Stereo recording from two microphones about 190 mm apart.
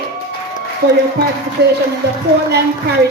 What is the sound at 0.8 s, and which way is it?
Speech, 60° right (ahead or behind).